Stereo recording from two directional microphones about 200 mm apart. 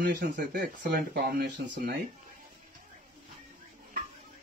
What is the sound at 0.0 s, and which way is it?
Speech, 55° right (ahead or behind).